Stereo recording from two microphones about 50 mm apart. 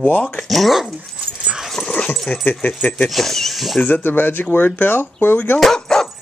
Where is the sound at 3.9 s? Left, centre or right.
Left.